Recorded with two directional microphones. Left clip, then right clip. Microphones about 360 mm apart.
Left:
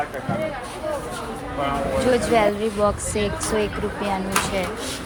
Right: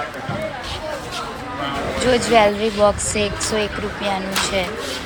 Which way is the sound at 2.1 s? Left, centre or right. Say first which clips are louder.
Right 6 dB; centre.